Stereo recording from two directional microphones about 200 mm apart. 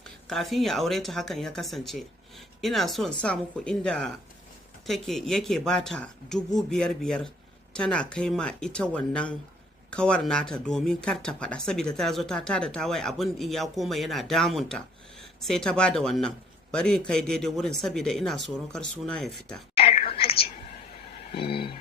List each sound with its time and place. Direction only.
0.3 s speech: centre (ahead or behind)
19.8 s whispering: 30° left (ahead or behind)
21.3 s a sound: 25° left (ahead or behind)